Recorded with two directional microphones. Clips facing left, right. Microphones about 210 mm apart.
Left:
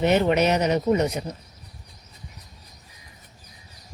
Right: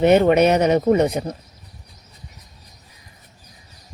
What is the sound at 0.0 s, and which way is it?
Speech, 55° right (ahead or behind).